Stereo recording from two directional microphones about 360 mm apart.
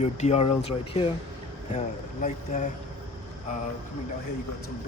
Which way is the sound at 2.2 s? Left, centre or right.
Left.